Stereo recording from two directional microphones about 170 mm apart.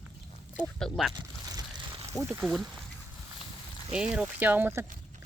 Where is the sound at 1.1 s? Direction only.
25° right (ahead or behind).